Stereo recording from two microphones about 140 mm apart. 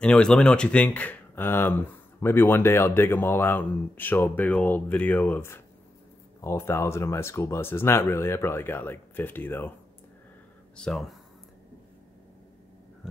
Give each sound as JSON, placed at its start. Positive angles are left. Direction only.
{"t": 0.0, "sound": "speech", "side_deg": 5}
{"t": 10.8, "sound": "speech", "side_deg": 5}
{"t": 13.0, "sound": "a sound", "side_deg": -5}